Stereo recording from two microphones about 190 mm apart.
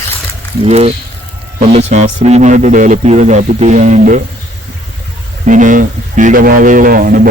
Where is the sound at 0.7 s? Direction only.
35° right (ahead or behind).